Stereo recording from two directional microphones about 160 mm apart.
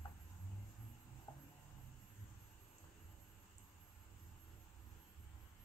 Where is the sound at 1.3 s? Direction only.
25° left (ahead or behind).